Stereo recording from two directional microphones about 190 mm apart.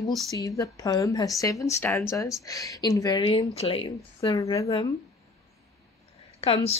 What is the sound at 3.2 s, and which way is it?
Speech, 30° left (ahead or behind).